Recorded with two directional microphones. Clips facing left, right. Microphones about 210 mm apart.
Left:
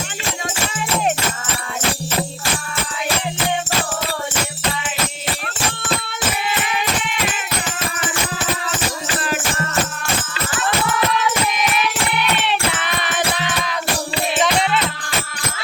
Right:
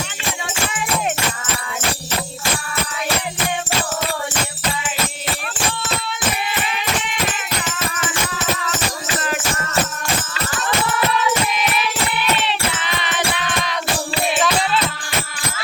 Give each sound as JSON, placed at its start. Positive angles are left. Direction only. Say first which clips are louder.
{"t": 12.5, "sound": "music", "louder": "left 2 dB", "side_deg": 55}
{"t": 14.3, "sound": "music", "louder": "left 3 dB", "side_deg": 20}